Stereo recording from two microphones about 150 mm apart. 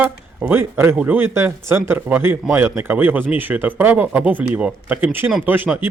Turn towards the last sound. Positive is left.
turn(degrees=-10)  # may be behind; listen again after turning